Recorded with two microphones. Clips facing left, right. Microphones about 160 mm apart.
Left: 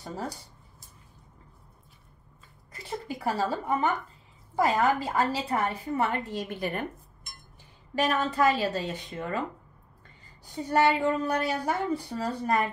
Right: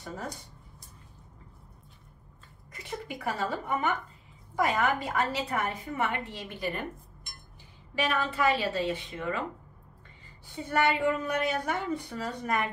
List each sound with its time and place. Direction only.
2.7 s a woman's voice: 30° left (ahead or behind)
6.3 s a woman's voice: 50° left (ahead or behind)
7.9 s a woman's voice: 40° left (ahead or behind)
10.4 s a woman's voice: 35° left (ahead or behind)